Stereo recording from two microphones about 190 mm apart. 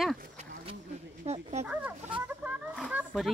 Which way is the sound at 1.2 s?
35° right (ahead or behind).